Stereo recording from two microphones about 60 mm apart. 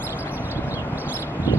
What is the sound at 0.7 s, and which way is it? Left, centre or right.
Clip-clop, right.